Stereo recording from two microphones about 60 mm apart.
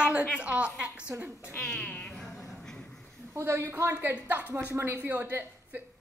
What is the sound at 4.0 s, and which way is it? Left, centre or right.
A woman's voice, right.